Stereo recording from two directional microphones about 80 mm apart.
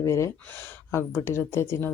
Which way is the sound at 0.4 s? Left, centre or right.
Left.